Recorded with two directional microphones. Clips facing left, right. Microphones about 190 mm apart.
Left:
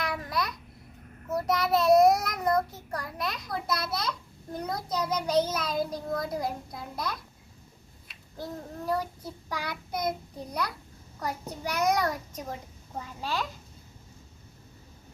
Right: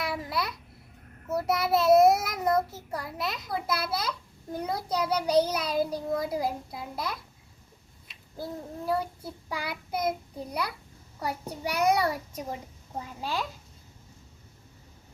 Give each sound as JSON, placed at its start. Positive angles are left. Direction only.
{"t": 0.0, "sound": "babbling", "side_deg": -5}
{"t": 1.4, "sound": "a child's voice", "side_deg": -5}
{"t": 8.9, "sound": "a child's voice", "side_deg": -5}